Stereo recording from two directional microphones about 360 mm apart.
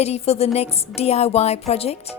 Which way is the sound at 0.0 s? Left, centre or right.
Centre.